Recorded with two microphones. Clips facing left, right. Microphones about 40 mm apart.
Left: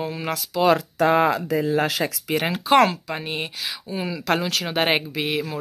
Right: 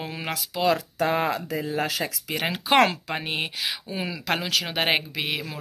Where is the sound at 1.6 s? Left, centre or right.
Left.